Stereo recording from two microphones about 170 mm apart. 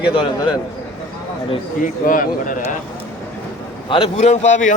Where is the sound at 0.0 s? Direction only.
30° left (ahead or behind).